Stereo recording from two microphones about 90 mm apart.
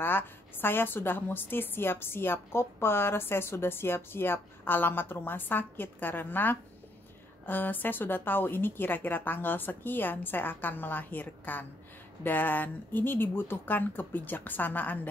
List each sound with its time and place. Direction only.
0.0 s a woman's voice: 25° left (ahead or behind)